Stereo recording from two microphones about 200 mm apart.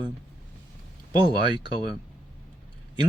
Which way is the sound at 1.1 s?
20° right (ahead or behind).